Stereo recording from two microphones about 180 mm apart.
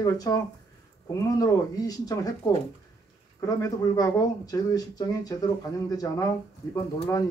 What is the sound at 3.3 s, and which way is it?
Speech, 20° left (ahead or behind).